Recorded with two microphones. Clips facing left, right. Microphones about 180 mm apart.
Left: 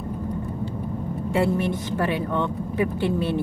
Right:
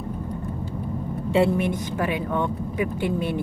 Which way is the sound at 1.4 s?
15° right (ahead or behind).